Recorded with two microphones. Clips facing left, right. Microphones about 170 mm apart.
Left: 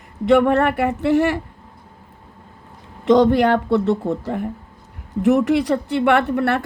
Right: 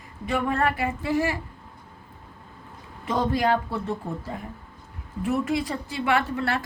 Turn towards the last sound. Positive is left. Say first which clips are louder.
# left 7 dB
turn(degrees=60)  # may be behind; listen again after turning